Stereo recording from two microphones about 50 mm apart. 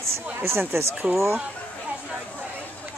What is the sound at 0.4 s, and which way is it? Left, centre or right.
Speech, right.